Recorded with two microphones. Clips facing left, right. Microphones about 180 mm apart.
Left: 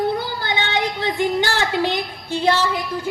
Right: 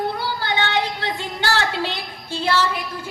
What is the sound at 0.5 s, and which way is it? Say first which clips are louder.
Music: left 1 dB; 15° left (ahead or behind).